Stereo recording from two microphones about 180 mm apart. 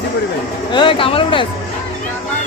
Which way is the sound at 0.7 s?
30° left (ahead or behind).